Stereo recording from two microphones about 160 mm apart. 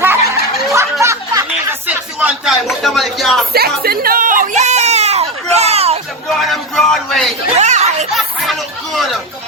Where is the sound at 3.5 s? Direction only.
75° right (ahead or behind); by 6.0 s 40° right (ahead or behind).